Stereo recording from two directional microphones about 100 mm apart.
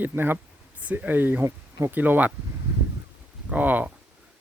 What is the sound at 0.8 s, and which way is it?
Speech, 15° right (ahead or behind).